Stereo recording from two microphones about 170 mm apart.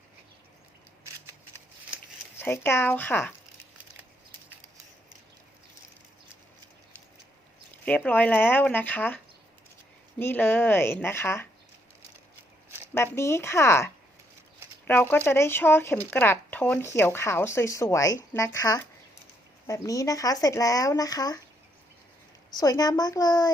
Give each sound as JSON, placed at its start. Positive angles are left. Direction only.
{"t": 2.4, "sound": "speech", "side_deg": 15}
{"t": 7.9, "sound": "speech", "side_deg": 10}
{"t": 13.1, "sound": "speech", "side_deg": 15}
{"t": 22.4, "sound": "speech", "side_deg": 20}